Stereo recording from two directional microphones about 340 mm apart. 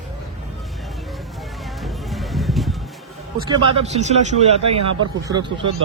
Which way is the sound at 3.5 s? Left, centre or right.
Centre.